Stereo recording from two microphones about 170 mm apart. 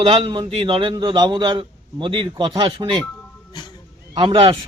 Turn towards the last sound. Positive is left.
turn(degrees=-30)  # may be behind; listen again after turning